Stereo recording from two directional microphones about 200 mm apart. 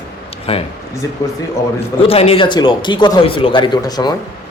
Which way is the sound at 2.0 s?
30° left (ahead or behind).